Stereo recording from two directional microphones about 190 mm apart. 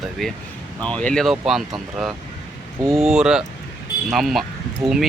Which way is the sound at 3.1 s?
5° right (ahead or behind).